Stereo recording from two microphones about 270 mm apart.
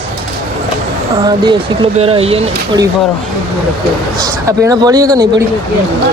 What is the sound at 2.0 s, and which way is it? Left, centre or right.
Speech, right.